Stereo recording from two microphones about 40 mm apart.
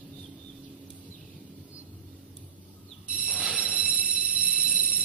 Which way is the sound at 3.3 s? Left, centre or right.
Right.